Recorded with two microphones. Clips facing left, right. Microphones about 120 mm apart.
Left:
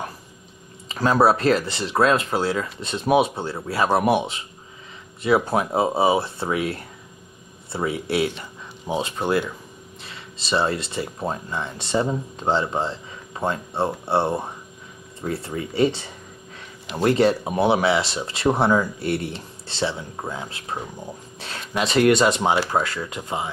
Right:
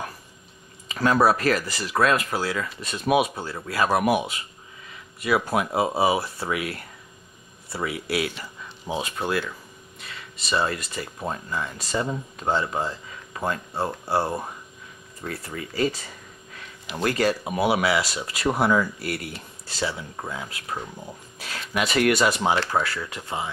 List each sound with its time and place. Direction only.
0.8 s speech: 30° left (ahead or behind)